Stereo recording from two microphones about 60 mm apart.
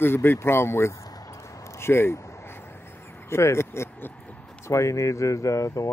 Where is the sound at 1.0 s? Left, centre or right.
Left.